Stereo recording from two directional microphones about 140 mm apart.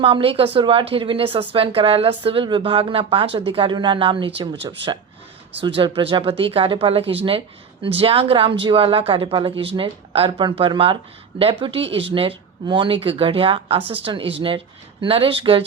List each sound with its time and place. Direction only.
0.0 s speech: 40° right (ahead or behind)